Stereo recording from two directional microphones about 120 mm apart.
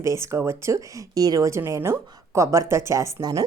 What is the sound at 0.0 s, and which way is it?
A woman's voice, 25° right (ahead or behind).